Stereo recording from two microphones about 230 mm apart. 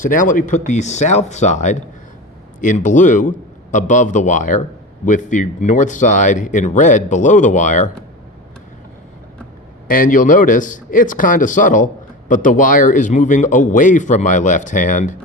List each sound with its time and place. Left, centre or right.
0.1 s a man's voice: left
9.8 s a man's voice: left